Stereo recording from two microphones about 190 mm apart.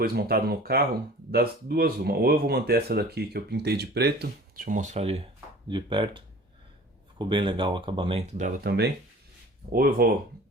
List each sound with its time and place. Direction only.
0.0 s speech: 55° right (ahead or behind)
9.7 s speech: 50° right (ahead or behind)